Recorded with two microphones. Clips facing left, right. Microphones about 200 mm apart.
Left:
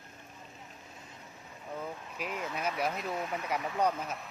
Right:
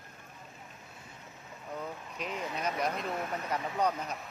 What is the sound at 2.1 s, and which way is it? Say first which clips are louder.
Speech: even; 5° left (ahead or behind).